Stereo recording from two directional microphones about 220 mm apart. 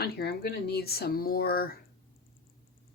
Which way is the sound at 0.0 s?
45° left (ahead or behind).